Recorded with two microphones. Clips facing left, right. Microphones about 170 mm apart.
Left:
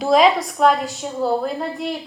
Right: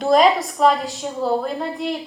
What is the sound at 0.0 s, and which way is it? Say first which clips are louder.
A woman's voice: even; centre (ahead or behind).